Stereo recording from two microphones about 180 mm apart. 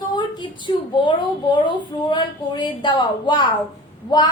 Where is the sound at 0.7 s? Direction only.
25° left (ahead or behind).